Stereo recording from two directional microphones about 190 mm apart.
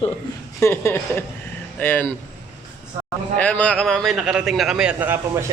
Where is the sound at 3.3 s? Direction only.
5° left (ahead or behind); by 5.4 s 10° right (ahead or behind).